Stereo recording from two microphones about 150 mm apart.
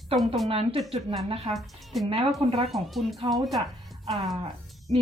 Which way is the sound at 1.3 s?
40° right (ahead or behind).